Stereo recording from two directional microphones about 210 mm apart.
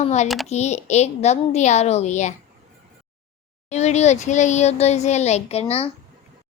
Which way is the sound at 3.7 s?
30° left (ahead or behind).